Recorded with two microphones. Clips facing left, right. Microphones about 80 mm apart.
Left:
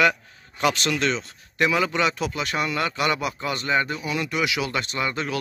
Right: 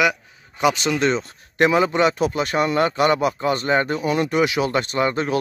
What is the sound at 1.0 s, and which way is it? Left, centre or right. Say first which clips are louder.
Speech: right 5 dB; right.